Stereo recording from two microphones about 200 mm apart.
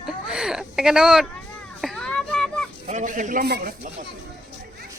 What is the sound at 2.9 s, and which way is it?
Speech, 40° right (ahead or behind).